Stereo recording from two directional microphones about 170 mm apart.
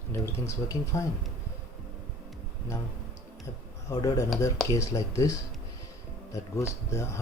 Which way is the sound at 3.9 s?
20° left (ahead or behind).